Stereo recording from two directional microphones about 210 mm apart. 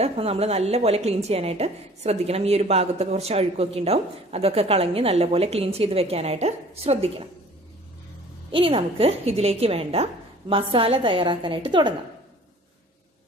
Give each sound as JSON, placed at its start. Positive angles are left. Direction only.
{"t": 0.0, "sound": "a woman's voice", "side_deg": -30}
{"t": 8.5, "sound": "a woman's voice", "side_deg": -25}